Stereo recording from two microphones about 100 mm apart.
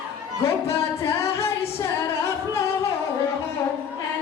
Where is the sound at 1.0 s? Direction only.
25° left (ahead or behind).